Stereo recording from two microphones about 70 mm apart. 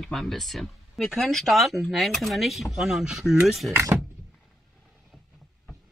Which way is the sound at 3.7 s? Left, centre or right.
Right.